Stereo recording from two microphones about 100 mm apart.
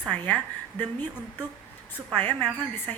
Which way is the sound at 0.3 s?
15° left (ahead or behind).